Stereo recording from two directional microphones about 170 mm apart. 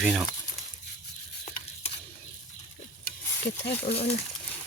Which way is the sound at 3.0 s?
80° left.